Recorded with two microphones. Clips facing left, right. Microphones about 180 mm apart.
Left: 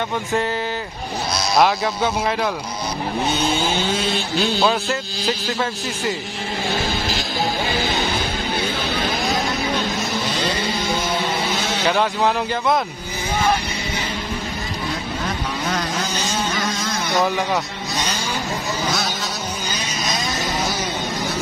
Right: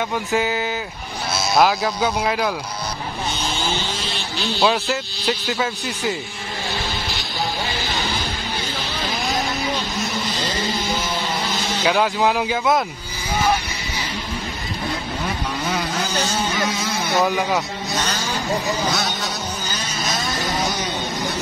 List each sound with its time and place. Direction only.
0.3 s speech: centre (ahead or behind)
3.3 s vehicle: 55° left (ahead or behind)
4.6 s speech: centre (ahead or behind)
7.7 s music: 55° left (ahead or behind)
10.3 s a sound: 60° left (ahead or behind)
11.4 s vehicle: 60° left (ahead or behind)
11.8 s speech: centre (ahead or behind)
15.6 s a sound: 10° right (ahead or behind)
17.1 s speech: centre (ahead or behind)
18.9 s speech: centre (ahead or behind)
19.7 s vehicle: 20° left (ahead or behind)